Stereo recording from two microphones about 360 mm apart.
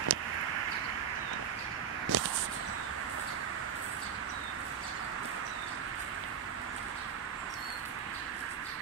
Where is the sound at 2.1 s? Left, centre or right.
Right.